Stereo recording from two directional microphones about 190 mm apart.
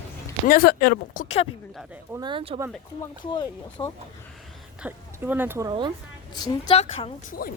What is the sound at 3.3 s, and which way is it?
Speech, 20° left (ahead or behind).